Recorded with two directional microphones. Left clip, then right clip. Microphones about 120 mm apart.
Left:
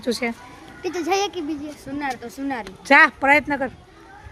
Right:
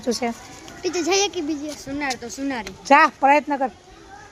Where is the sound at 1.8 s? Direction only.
35° left (ahead or behind).